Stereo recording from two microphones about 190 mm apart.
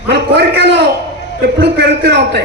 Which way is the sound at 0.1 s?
60° right (ahead or behind).